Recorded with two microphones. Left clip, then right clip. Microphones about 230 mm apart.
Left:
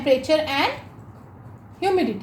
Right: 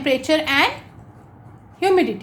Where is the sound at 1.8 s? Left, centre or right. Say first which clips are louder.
Right 4 dB; right.